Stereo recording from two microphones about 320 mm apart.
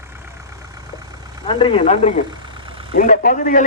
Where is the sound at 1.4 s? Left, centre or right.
Centre.